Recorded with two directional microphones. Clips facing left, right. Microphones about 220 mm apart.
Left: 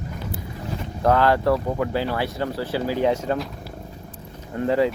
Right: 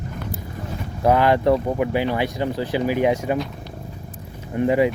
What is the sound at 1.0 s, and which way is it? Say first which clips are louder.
Speech: right 2 dB; 15° right (ahead or behind).